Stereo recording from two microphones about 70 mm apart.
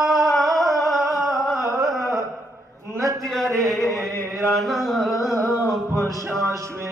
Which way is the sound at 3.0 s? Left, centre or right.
Right.